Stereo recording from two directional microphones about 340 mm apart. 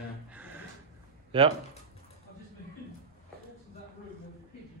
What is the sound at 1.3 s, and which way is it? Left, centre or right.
Speech, centre.